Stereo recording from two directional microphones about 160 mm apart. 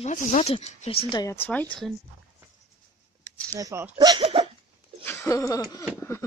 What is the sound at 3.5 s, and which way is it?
Speech, 20° right (ahead or behind).